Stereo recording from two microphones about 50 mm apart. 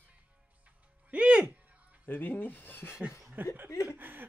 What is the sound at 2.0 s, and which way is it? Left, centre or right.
Speech, left.